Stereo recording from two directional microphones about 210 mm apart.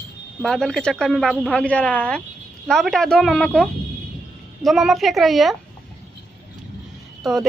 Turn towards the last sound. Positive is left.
turn(degrees=0)  # may be behind; listen again after turning